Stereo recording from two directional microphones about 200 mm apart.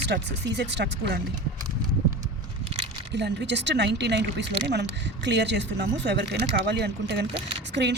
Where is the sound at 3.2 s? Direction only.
60° right (ahead or behind).